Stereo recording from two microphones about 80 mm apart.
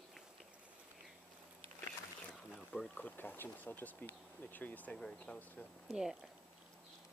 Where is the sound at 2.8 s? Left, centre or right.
Centre.